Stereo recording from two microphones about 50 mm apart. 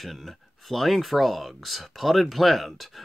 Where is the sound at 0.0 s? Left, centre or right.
Centre.